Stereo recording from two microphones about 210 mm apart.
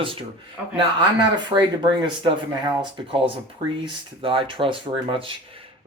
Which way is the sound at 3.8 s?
25° right (ahead or behind).